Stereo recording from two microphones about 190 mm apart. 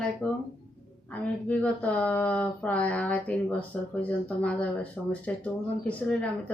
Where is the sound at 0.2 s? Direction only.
10° left (ahead or behind).